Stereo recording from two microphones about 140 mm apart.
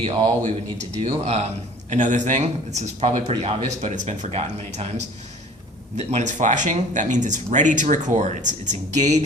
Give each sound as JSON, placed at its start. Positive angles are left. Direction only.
{"t": 0.0, "sound": "a man's voice", "side_deg": -45}